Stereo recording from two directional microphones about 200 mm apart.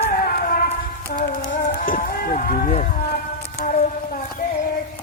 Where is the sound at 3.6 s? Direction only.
40° left (ahead or behind).